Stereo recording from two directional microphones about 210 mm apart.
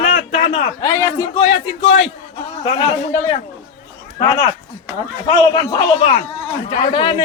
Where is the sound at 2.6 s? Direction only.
20° left (ahead or behind).